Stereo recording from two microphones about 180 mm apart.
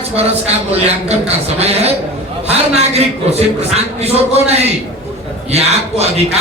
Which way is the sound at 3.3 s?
35° right (ahead or behind).